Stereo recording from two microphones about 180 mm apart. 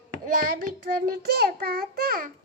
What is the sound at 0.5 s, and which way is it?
Child singing, 50° right (ahead or behind).